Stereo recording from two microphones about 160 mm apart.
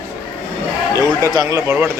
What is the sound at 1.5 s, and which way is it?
Speech, 15° right (ahead or behind).